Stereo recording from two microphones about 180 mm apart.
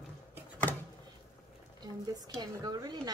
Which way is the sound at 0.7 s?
10° left (ahead or behind).